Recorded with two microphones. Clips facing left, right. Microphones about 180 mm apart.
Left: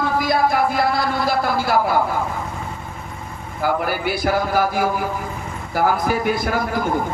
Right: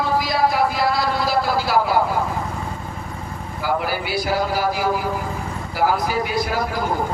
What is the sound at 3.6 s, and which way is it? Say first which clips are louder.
Speech: left 2 dB; 55° left (ahead or behind).